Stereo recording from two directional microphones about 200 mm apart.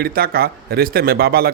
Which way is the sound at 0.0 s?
50° right (ahead or behind).